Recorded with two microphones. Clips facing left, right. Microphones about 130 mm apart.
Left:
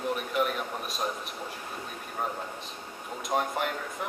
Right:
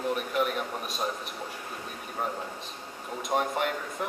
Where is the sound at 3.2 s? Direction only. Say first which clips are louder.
Right 1 dB; centre (ahead or behind).